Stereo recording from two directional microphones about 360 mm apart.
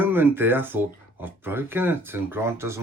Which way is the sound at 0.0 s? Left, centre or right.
Centre.